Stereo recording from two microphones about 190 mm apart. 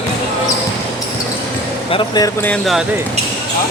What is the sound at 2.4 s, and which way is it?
Speech, 5° left (ahead or behind).